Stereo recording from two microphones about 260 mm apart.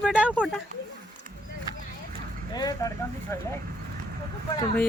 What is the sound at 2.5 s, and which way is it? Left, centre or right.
Speech, centre.